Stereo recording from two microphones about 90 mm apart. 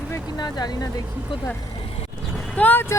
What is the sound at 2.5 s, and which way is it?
Speech, 20° left (ahead or behind).